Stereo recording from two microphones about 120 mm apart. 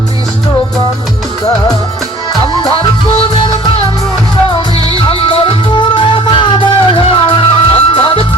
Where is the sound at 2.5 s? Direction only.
40° left (ahead or behind).